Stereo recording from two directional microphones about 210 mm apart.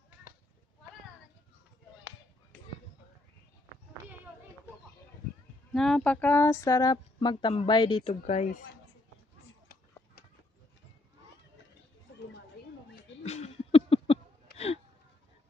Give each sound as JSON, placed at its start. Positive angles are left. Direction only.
{"t": 5.7, "sound": "speech", "side_deg": 5}
{"t": 8.1, "sound": "speech", "side_deg": 35}
{"t": 13.2, "sound": "a sound", "side_deg": 30}